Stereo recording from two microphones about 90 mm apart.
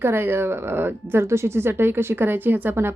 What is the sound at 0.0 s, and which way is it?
A woman's voice, 25° right (ahead or behind).